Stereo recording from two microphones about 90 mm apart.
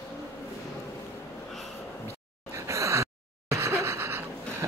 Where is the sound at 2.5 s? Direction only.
35° right (ahead or behind).